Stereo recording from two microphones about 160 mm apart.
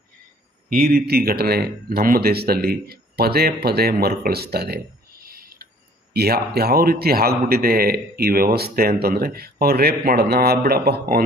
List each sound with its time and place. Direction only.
0.7 s a man's voice: 65° right (ahead or behind); by 4.8 s 85° right
5.2 s owl: 70° right (ahead or behind)
6.1 s a man's voice: 80° right